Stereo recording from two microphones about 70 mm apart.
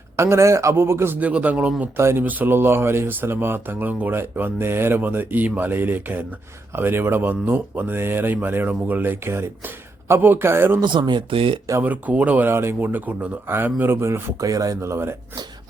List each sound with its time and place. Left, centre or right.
0.2 s speech: right
1.2 s speech: right
2.0 s speech: right
2.2 s speech: right
9.2 s speech: right
10.8 s speech: right
11.8 s speech: right
12.5 s speech: right
13.9 s speech: right
14.8 s speech: right